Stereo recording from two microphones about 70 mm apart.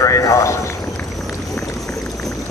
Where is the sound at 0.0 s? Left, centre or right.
Left.